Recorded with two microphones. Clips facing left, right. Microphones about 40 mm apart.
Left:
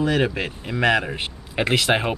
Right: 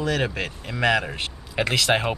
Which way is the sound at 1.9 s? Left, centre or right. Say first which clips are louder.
Left 1 dB; centre.